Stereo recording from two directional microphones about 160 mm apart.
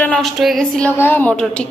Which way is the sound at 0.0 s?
5° left (ahead or behind).